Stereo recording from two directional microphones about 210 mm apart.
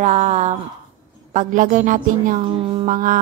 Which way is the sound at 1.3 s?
40° right (ahead or behind).